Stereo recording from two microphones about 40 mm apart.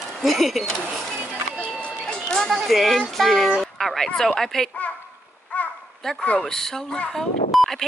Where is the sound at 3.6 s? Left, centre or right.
Centre.